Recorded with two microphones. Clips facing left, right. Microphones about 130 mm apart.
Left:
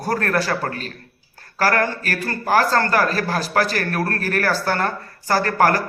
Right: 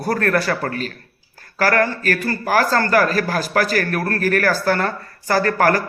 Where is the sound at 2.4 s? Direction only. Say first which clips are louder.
Even; 30° left (ahead or behind).